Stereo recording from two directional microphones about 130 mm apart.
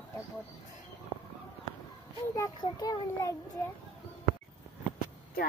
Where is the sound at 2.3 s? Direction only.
25° left (ahead or behind).